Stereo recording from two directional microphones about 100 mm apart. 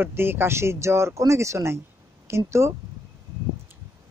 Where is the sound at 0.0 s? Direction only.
20° right (ahead or behind).